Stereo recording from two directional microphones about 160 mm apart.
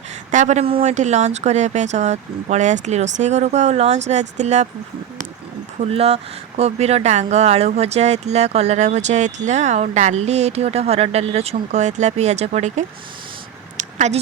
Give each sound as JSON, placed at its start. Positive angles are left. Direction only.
{"t": 0.3, "sound": "speech", "side_deg": -50}
{"t": 5.8, "sound": "speech", "side_deg": -40}
{"t": 13.7, "sound": "a sound", "side_deg": -45}